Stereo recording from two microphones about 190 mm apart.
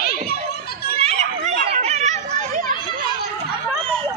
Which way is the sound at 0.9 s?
35° right (ahead or behind).